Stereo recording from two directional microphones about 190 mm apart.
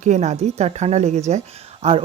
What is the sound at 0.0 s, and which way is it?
A woman's voice, 40° right (ahead or behind).